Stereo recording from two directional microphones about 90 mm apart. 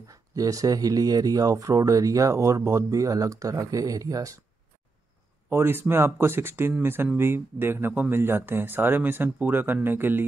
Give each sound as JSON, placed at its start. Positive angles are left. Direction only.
{"t": 0.1, "sound": "speech", "side_deg": -40}
{"t": 5.5, "sound": "speech", "side_deg": -25}